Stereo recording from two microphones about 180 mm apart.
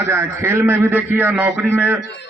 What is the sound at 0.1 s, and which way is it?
A man's voice, 15° right (ahead or behind).